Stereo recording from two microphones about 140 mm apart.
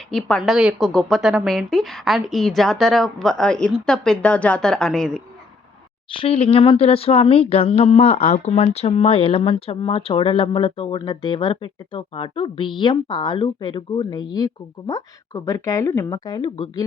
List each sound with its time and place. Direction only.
0.1 s a woman's voice: 5° left (ahead or behind)
6.1 s speech: 40° left (ahead or behind)